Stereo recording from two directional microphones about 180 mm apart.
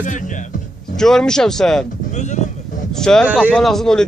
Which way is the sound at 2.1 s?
40° left (ahead or behind).